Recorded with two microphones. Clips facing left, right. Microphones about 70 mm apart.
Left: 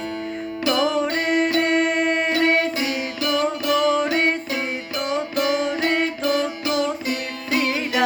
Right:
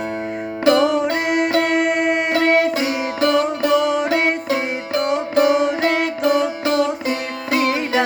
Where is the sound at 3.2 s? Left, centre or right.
Right.